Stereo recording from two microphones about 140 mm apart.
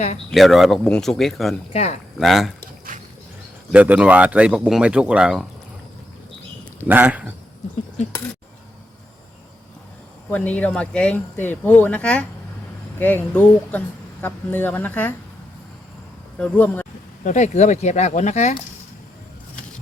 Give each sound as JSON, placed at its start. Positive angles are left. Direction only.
{"t": 0.3, "sound": "speech", "side_deg": 0}
{"t": 1.7, "sound": "speech", "side_deg": 50}
{"t": 2.1, "sound": "speech", "side_deg": 0}
{"t": 3.7, "sound": "speech", "side_deg": -10}
{"t": 6.8, "sound": "speech", "side_deg": -10}
{"t": 10.3, "sound": "speech", "side_deg": 10}
{"t": 16.4, "sound": "speech", "side_deg": 10}
{"t": 17.2, "sound": "speech", "side_deg": 60}